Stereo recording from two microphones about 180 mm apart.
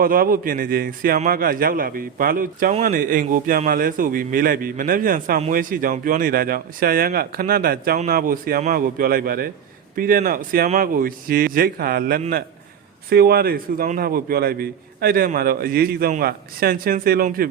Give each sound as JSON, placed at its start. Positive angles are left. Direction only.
{"t": 0.0, "sound": "a man's voice", "side_deg": -55}